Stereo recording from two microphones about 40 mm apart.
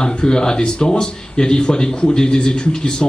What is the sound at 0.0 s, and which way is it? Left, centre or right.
Speech, centre.